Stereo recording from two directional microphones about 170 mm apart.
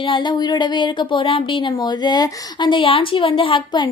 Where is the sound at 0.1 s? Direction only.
25° left (ahead or behind).